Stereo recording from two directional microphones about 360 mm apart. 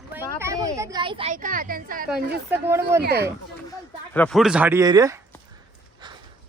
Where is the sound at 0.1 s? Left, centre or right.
Centre; by 2.0 s right.